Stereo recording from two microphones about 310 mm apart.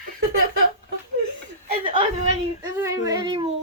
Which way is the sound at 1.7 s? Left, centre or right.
Centre.